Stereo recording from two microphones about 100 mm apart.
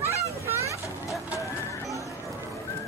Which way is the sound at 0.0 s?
30° right (ahead or behind).